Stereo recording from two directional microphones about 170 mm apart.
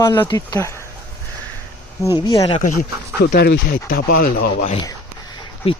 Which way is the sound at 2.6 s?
50° left (ahead or behind).